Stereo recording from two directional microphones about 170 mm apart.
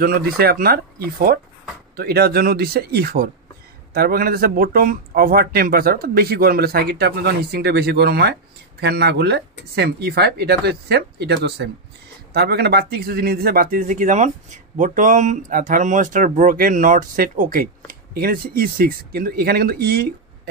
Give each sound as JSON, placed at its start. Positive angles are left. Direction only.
{"t": 0.0, "sound": "speech", "side_deg": -65}
{"t": 12.3, "sound": "speech", "side_deg": -70}